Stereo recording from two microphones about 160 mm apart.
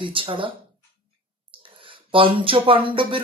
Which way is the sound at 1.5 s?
30° right (ahead or behind).